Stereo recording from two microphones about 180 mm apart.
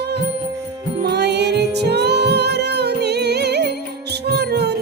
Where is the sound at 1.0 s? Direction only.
65° right (ahead or behind).